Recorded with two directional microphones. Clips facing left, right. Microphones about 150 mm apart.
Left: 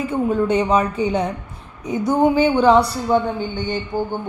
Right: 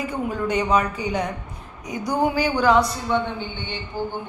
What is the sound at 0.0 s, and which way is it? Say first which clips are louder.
A woman's voice: left 6 dB; 30° left (ahead or behind).